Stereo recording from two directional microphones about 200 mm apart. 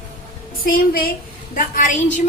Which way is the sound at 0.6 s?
45° left (ahead or behind).